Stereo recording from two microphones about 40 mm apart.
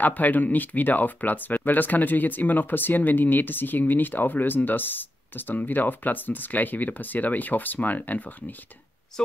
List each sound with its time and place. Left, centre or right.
0.0 s speech: left